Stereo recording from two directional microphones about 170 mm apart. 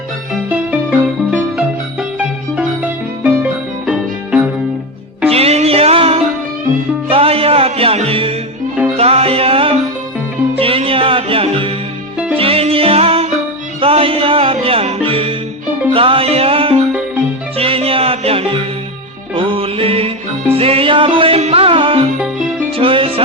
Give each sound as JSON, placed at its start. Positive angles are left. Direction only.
{"t": 0.5, "sound": "music", "side_deg": -10}
{"t": 5.3, "sound": "music", "side_deg": -35}